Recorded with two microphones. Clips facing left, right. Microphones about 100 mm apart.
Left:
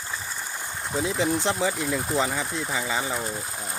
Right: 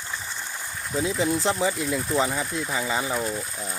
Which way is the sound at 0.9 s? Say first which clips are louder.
Right 1 dB; centre (ahead or behind).